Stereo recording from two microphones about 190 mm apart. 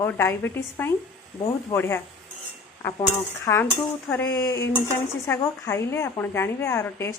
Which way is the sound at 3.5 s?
15° left (ahead or behind).